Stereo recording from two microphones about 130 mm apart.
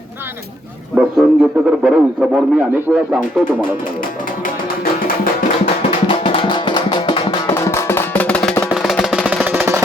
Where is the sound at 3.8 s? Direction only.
90° left.